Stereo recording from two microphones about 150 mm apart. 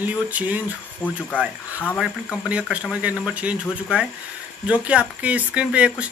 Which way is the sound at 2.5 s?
5° right (ahead or behind).